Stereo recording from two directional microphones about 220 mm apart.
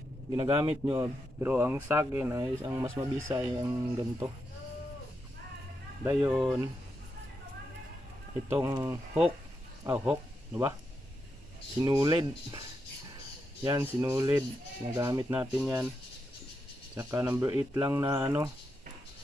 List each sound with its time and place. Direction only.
0.4 s speech: 20° right (ahead or behind)
6.0 s speech: 5° right (ahead or behind)
8.5 s speech: 10° right (ahead or behind)
11.8 s speech: 20° right (ahead or behind)
13.7 s speech: 15° right (ahead or behind)
15.5 s speech: 5° right (ahead or behind)
16.9 s speech: 10° right (ahead or behind)